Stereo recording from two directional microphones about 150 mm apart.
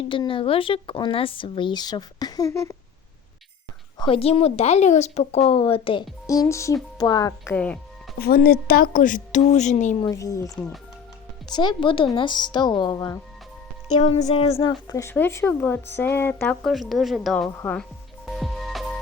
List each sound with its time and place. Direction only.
0.3 s speech: 35° left (ahead or behind); by 2.7 s 20° left (ahead or behind)
3.9 s a woman's voice: 35° left (ahead or behind)
6.2 s a woman's voice: 20° left (ahead or behind)
7.5 s speech: 10° left (ahead or behind)
8.2 s a woman's voice: 85° left; by 10.0 s 50° left (ahead or behind)
10.0 s a woman's voice: 25° left (ahead or behind)
14.3 s a woman's voice: 45° left (ahead or behind)
14.6 s a woman's voice: 25° left (ahead or behind)
16.9 s speech: centre (ahead or behind)
18.3 s music: centre (ahead or behind)